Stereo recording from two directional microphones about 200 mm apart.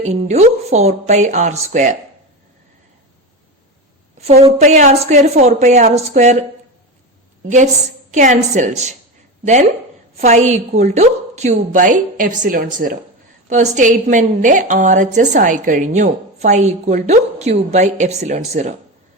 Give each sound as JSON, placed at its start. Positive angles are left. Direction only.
{"t": 0.0, "sound": "a woman's voice", "side_deg": -35}
{"t": 4.4, "sound": "a woman's voice", "side_deg": -35}
{"t": 8.1, "sound": "a woman's voice", "side_deg": -40}
{"t": 13.5, "sound": "a woman's voice", "side_deg": -35}